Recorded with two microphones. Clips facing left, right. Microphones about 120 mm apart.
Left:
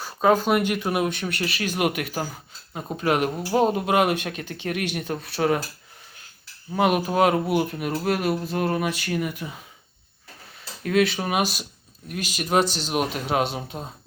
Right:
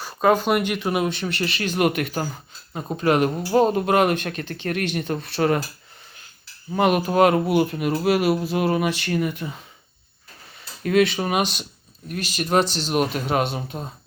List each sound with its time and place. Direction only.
0.0 s a sound: centre (ahead or behind)
0.7 s speech: centre (ahead or behind)
6.7 s speech: centre (ahead or behind)
13.0 s speech: centre (ahead or behind)